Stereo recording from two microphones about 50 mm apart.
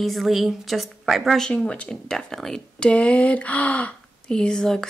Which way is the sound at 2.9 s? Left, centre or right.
Left.